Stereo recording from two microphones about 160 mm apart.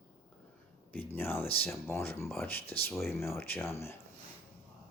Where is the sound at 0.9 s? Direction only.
15° left (ahead or behind).